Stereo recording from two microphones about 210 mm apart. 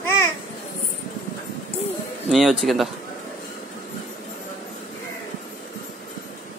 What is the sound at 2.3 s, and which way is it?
Speech, centre (ahead or behind).